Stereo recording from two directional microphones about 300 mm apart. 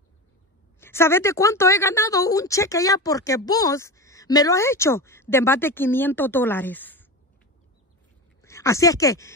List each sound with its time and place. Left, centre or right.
0.7 s a woman's voice: centre
8.4 s speech: centre